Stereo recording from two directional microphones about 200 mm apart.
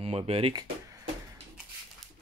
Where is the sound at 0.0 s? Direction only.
30° right (ahead or behind).